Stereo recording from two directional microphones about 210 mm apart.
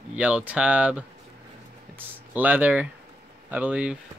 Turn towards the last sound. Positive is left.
turn(degrees=-5)  # may be behind; listen again after turning